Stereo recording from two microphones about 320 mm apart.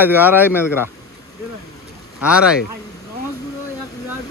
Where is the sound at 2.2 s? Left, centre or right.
Centre.